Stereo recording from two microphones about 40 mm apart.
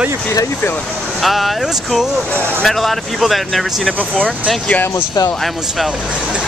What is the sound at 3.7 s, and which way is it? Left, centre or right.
Speech, centre.